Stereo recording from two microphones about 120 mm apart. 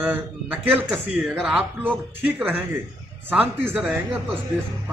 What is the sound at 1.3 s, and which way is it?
Speech, centre (ahead or behind).